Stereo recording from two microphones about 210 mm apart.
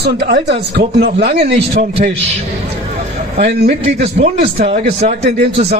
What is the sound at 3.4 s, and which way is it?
Speech, 55° right (ahead or behind).